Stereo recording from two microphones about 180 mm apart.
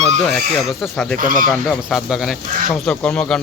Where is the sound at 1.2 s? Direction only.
50° right (ahead or behind).